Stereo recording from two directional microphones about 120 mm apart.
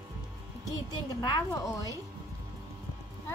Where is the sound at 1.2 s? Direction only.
35° left (ahead or behind).